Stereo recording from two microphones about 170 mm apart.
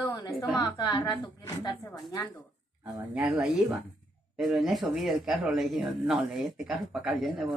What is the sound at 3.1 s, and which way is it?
Speech, 10° right (ahead or behind).